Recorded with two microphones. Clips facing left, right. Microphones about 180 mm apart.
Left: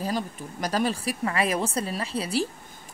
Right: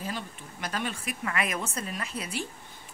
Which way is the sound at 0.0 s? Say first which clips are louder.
Left 7 dB; 40° left (ahead or behind).